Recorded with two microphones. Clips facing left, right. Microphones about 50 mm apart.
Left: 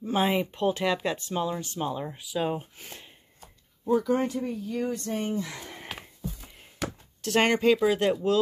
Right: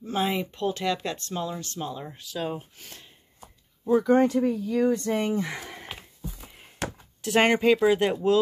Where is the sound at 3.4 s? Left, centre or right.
Centre.